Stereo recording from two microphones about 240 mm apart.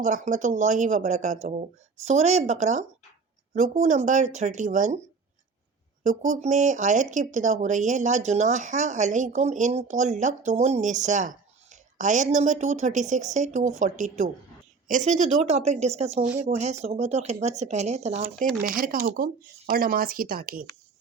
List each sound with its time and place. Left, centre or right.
0.0 s speech: right
6.0 s a woman's voice: right